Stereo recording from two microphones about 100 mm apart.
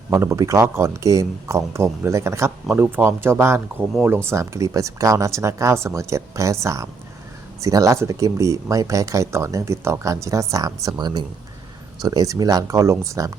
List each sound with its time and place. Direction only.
0.1 s speech: 30° right (ahead or behind)
10.8 s speech: 45° right (ahead or behind)